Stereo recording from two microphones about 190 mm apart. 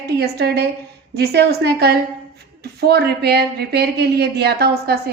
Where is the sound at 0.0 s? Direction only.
60° right (ahead or behind).